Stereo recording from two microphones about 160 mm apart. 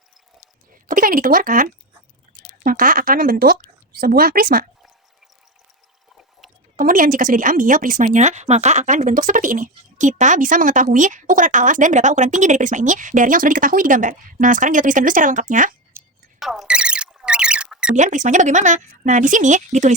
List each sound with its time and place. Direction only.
0.9 s speech: 60° right (ahead or behind)
6.7 s speech: 60° right (ahead or behind)
16.4 s a sound: centre (ahead or behind)
17.9 s speech: 50° right (ahead or behind)